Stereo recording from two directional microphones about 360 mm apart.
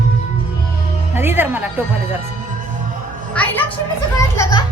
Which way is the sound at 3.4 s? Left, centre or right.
Centre.